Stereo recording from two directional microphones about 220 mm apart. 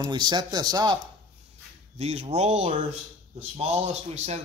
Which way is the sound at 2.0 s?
30° right (ahead or behind).